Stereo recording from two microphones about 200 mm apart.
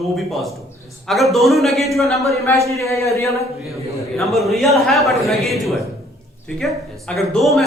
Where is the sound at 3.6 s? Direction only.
Centre (ahead or behind).